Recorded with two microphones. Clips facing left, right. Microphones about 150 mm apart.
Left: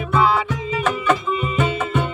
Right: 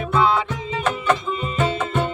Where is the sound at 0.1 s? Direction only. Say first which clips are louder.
Left 1 dB; 5° left (ahead or behind).